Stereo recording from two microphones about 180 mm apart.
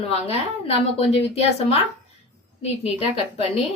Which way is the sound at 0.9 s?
35° left (ahead or behind).